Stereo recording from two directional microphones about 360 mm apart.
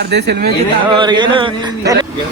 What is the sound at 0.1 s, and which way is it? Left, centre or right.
Speech, right.